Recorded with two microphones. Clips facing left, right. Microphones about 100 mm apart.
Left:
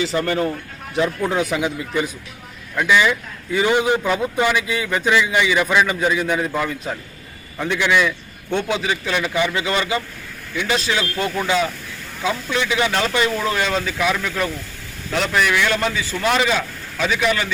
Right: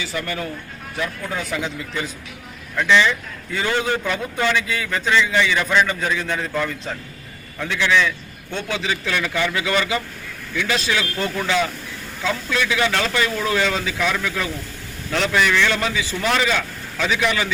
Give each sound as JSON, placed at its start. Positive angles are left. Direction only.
{"t": 0.3, "sound": "speech", "side_deg": 35}
{"t": 1.3, "sound": "a man's voice", "side_deg": 15}
{"t": 13.6, "sound": "a man's voice", "side_deg": 10}
{"t": 17.1, "sound": "speech", "side_deg": 0}